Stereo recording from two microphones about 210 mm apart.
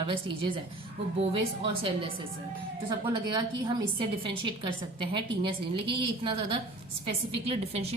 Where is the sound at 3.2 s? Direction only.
20° right (ahead or behind).